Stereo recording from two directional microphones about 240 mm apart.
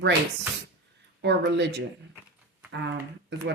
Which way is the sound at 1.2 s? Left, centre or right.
Right.